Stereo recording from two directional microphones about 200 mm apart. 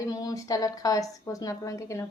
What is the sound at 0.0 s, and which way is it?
A woman's voice, 15° left (ahead or behind).